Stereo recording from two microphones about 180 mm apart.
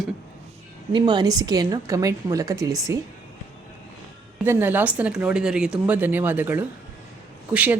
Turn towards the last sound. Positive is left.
turn(degrees=-10)  # may be behind; listen again after turning